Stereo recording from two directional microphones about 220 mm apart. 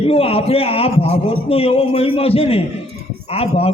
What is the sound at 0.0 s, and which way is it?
A man's voice, 25° left (ahead or behind).